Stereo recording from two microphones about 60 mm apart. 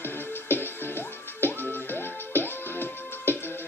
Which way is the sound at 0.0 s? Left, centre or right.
Left.